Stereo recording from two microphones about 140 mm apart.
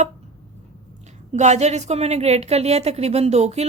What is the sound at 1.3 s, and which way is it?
A woman's voice, 55° right (ahead or behind).